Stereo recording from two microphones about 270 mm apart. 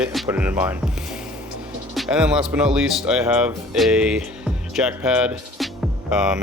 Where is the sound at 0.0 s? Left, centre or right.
Centre.